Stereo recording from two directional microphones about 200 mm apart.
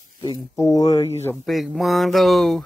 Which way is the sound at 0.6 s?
15° left (ahead or behind).